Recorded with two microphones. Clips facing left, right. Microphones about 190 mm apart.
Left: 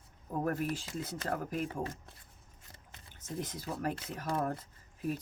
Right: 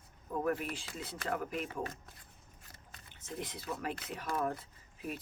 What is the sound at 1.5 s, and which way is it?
Speech, 30° left (ahead or behind).